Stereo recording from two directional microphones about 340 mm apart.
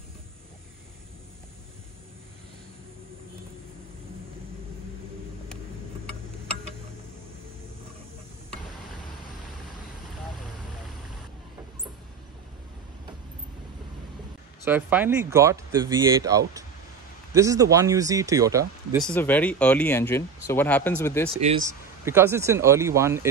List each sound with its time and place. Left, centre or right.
14.6 s speech: centre
19.0 s speech: centre
21.3 s speech: centre
21.6 s speech: centre